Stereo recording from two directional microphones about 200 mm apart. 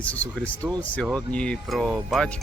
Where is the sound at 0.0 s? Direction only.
5° left (ahead or behind).